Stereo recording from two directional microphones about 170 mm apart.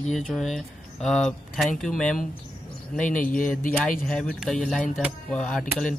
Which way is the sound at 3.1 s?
50° left (ahead or behind).